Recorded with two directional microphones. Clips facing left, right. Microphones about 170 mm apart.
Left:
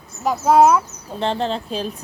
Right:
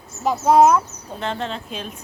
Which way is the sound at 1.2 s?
30° left (ahead or behind).